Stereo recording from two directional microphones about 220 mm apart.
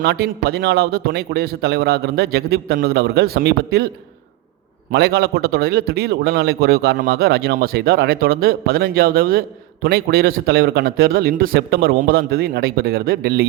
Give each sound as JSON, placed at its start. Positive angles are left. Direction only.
{"t": 0.0, "sound": "a man's voice", "side_deg": -45}
{"t": 4.9, "sound": "a man's voice", "side_deg": -45}